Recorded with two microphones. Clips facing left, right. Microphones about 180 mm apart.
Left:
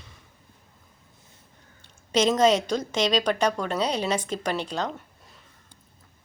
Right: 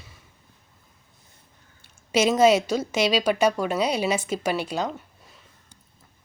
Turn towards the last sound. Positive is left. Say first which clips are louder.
# right 2 dB
turn(degrees=-5)  # may be behind; listen again after turning